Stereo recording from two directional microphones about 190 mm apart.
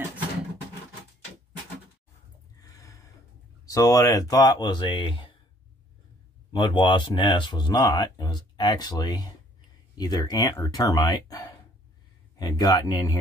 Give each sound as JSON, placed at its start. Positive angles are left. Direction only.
{"t": 2.6, "sound": "a sound", "side_deg": 15}
{"t": 3.6, "sound": "speech", "side_deg": 15}
{"t": 6.5, "sound": "speech", "side_deg": 25}